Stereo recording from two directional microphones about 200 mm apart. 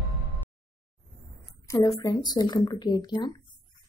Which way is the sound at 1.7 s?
15° left (ahead or behind).